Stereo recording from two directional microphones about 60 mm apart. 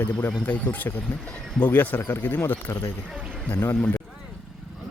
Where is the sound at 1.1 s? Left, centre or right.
Centre.